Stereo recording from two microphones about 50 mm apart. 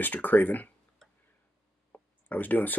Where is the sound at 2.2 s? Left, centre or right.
Left.